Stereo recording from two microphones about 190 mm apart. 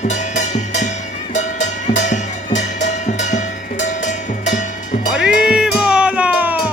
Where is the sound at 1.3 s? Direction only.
40° left (ahead or behind).